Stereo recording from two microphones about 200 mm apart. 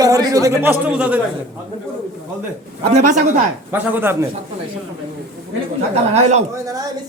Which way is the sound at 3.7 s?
10° right (ahead or behind).